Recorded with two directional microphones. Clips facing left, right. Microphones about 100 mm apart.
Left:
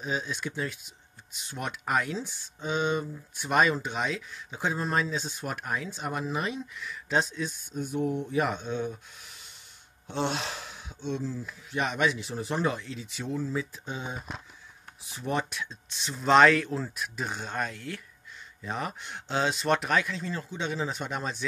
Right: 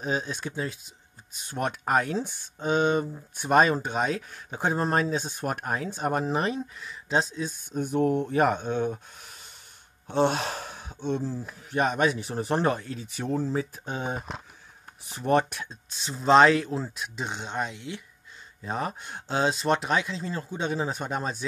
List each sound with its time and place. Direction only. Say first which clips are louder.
0.0 s speech: right 3 dB; 40° right (ahead or behind)
1.4 s speech: right 6 dB; 45° right (ahead or behind)
2.1 s speech: right 5 dB; 55° right (ahead or behind); by 7.5 s 35° right (ahead or behind)
7.7 s speech: right 6 dB; 55° right (ahead or behind)
10.0 s speech: right 6 dB; 45° right (ahead or behind)
11.3 s speech: right 4 dB; 40° right (ahead or behind); by 15.6 s 55° right (ahead or behind)
15.6 s speech: left 1 dB; 35° right (ahead or behind); by 18.0 s 20° right (ahead or behind)
18.6 s speech: right 3 dB; 35° right (ahead or behind)